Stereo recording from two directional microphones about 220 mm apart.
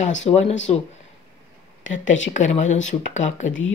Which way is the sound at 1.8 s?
60° left (ahead or behind).